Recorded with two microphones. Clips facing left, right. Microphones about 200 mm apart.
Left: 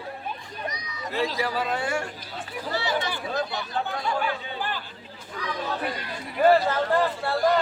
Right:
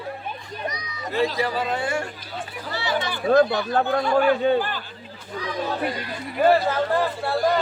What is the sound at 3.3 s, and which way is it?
Speech, 60° right (ahead or behind).